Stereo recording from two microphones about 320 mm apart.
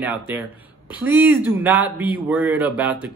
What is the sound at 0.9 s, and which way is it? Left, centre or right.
Speech, centre.